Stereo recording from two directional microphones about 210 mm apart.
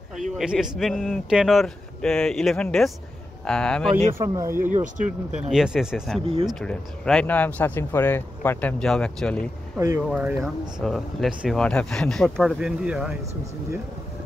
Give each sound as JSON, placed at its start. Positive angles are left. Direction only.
{"t": 0.4, "sound": "speech", "side_deg": 0}
{"t": 4.1, "sound": "speech", "side_deg": -15}
{"t": 4.6, "sound": "speech", "side_deg": -35}
{"t": 5.5, "sound": "speech", "side_deg": -5}
{"t": 6.2, "sound": "speech", "side_deg": -25}
{"t": 6.5, "sound": "speech", "side_deg": 5}
{"t": 9.8, "sound": "speech", "side_deg": -15}